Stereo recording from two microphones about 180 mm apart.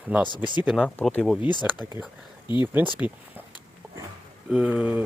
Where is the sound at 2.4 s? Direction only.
25° left (ahead or behind).